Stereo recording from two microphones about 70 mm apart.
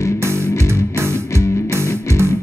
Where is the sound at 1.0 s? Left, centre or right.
Right.